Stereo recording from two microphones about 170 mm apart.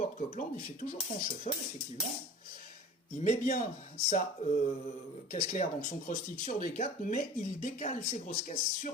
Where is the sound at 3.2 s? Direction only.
50° left (ahead or behind).